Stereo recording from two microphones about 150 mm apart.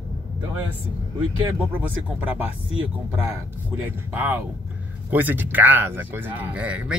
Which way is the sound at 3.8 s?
10° right (ahead or behind).